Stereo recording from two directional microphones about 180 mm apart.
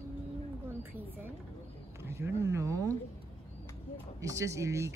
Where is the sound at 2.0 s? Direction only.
15° right (ahead or behind).